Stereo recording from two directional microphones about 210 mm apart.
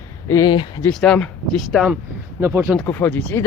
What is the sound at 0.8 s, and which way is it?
Speech, 5° left (ahead or behind).